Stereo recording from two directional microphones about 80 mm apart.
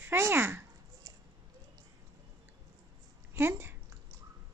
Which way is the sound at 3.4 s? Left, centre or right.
Right.